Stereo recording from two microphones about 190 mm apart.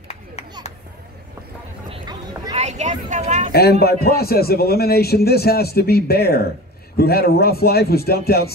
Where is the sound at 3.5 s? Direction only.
55° left (ahead or behind).